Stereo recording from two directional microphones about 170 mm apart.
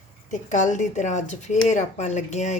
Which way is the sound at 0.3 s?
50° left (ahead or behind).